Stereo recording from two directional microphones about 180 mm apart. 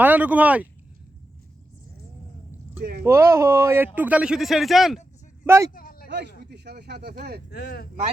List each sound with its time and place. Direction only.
0.0 s speech: 10° right (ahead or behind)
3.0 s speech: 15° right (ahead or behind)
5.7 s a sound: 55° left (ahead or behind)
6.1 s speech: 70° right (ahead or behind)
7.5 s speech: 65° left (ahead or behind)